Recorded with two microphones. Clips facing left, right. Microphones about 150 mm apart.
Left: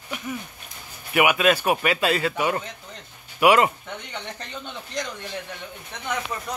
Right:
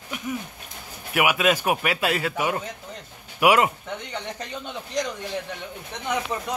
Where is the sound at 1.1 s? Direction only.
5° right (ahead or behind).